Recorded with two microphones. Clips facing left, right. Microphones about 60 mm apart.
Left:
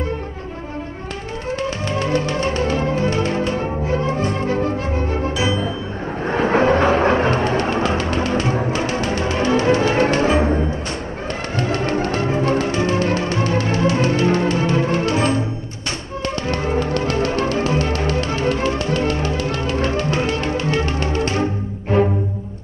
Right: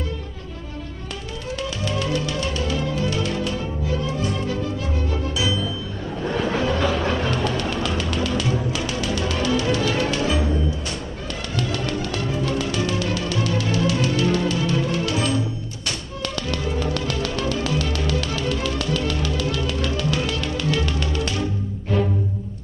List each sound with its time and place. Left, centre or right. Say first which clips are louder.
1.6 s music: left 3 dB; left
16.4 s music: left 5 dB; left